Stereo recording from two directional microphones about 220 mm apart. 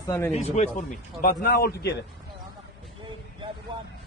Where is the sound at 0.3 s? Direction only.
30° left (ahead or behind).